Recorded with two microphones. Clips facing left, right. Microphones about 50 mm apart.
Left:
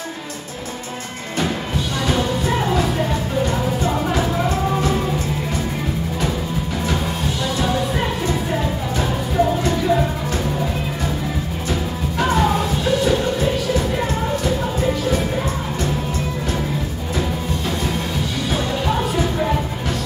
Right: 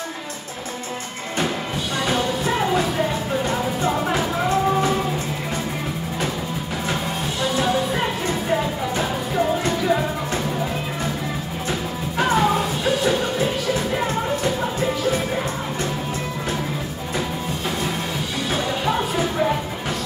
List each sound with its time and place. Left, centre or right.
2.0 s music: centre
7.4 s music: centre
12.2 s music: centre
18.5 s music: centre